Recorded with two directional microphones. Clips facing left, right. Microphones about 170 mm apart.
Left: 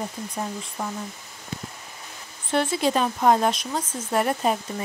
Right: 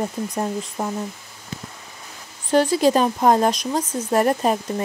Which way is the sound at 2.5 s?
40° right (ahead or behind).